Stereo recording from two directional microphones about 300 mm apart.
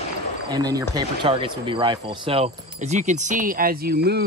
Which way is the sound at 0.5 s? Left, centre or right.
Centre.